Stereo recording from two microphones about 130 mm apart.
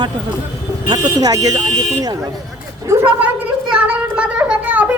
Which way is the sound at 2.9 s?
25° right (ahead or behind).